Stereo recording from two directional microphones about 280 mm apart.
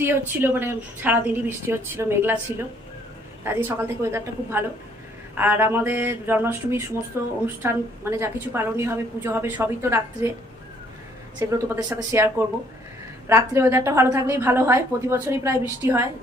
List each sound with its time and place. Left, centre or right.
0.0 s a woman's voice: centre
3.4 s a woman's voice: centre
11.3 s a woman's voice: centre
13.3 s a woman's voice: centre